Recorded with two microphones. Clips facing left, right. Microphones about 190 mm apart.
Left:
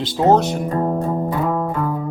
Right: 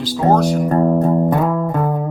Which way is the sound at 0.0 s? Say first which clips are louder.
Even; 25° left (ahead or behind).